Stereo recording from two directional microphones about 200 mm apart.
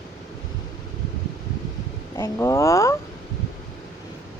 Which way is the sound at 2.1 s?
15° left (ahead or behind).